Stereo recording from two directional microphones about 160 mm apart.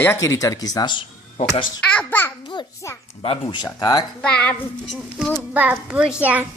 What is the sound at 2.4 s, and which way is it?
A child's voice, 30° left (ahead or behind).